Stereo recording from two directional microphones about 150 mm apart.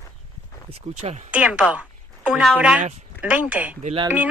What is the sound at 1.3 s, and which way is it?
Speech, 10° right (ahead or behind).